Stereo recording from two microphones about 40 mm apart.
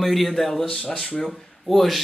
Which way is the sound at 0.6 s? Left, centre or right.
Left.